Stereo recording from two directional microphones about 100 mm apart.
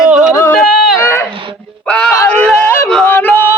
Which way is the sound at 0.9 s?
25° left (ahead or behind).